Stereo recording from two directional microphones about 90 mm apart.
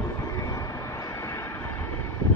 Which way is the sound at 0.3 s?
35° left (ahead or behind).